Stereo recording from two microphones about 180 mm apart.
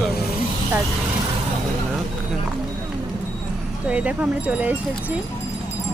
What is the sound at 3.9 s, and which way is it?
Speech, 5° right (ahead or behind).